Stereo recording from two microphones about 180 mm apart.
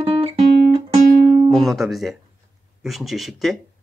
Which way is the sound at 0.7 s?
30° right (ahead or behind).